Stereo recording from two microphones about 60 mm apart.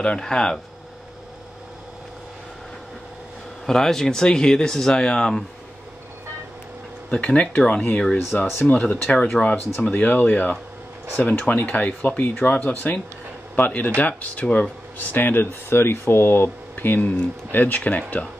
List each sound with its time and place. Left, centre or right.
0.0 s speech: centre
3.6 s speech: centre
7.1 s speech: left
9.8 s speech: left
16.4 s speech: left